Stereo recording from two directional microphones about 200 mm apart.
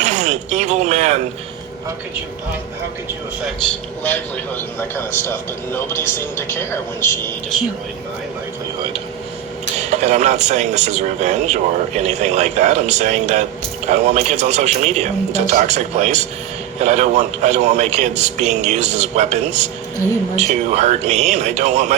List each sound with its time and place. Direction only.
0.0 s speech: 35° right (ahead or behind)
4.0 s a man's voice: 10° left (ahead or behind)
9.9 s a man's voice: 35° right (ahead or behind)